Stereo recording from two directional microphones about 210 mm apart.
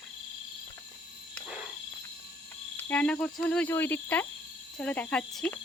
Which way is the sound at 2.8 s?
5° left (ahead or behind).